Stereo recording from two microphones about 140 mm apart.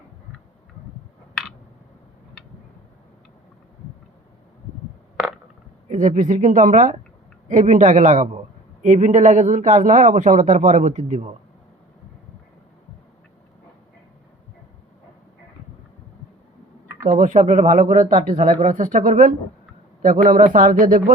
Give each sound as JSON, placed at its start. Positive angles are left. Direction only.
{"t": 5.9, "sound": "a man's voice", "side_deg": -65}
{"t": 17.1, "sound": "a man's voice", "side_deg": -70}